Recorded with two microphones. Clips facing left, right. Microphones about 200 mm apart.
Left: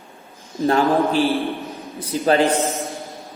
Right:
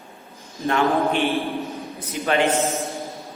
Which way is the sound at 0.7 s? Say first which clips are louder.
Left 2 dB; 35° left (ahead or behind).